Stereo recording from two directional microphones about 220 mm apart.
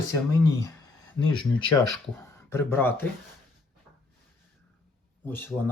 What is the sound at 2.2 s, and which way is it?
Speech, 10° left (ahead or behind).